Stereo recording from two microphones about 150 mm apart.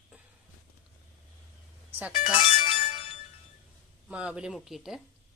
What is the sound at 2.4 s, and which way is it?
Music, 35° left (ahead or behind).